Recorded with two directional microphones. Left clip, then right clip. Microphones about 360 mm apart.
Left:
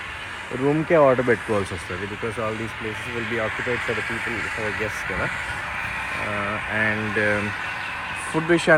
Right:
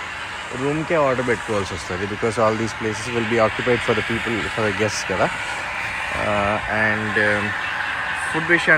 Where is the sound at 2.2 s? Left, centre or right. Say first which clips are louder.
Right 9 dB; right.